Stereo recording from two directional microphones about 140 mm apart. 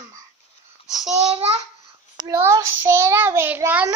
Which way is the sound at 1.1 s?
45° right (ahead or behind).